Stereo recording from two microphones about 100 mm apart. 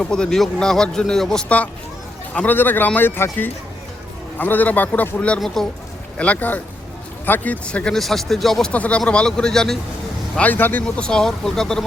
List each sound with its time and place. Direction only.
0.0 s a man's voice: 5° left (ahead or behind)
4.4 s a man's voice: 15° left (ahead or behind)
8.7 s a man's voice: 15° left (ahead or behind)
10.3 s a man's voice: 15° left (ahead or behind)